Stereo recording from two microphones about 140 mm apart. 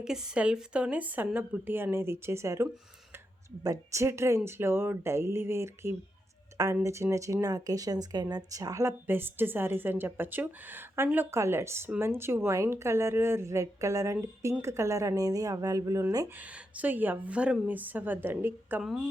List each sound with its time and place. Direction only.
0.0 s a woman's voice: 5° right (ahead or behind); by 16.3 s 20° right (ahead or behind)
16.4 s a woman's voice: 10° right (ahead or behind)